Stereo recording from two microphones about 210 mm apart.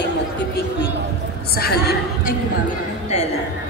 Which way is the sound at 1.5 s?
50° left (ahead or behind).